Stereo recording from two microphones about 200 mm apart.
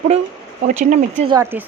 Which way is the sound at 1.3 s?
10° right (ahead or behind).